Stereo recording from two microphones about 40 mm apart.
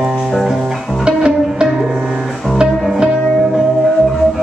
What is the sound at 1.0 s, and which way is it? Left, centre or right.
Music, right.